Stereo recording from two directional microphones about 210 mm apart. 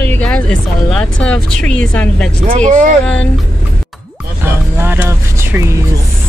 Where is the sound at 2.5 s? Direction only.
35° right (ahead or behind).